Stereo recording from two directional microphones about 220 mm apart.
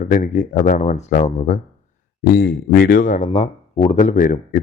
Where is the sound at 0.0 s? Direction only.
35° left (ahead or behind).